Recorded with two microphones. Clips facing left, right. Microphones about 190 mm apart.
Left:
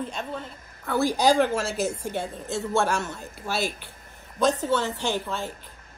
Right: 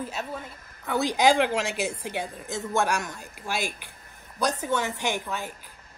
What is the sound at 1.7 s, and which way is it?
Speech, 40° left (ahead or behind).